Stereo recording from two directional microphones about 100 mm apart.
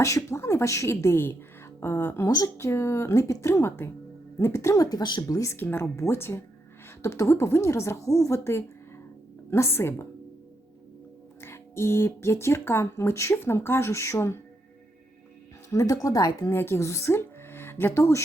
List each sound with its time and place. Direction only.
0.3 s a woman's voice: 30° left (ahead or behind); by 5.4 s 45° left (ahead or behind)
5.4 s speech: 25° left (ahead or behind)
11.3 s speech: 25° left (ahead or behind)
15.7 s speech: 35° left (ahead or behind)